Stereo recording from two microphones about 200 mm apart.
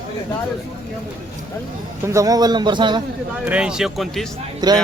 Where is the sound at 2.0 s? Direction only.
15° right (ahead or behind).